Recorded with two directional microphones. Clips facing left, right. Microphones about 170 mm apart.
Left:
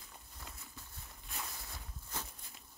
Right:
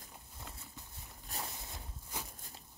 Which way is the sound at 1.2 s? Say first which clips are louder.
Right 3 dB; 35° right (ahead or behind).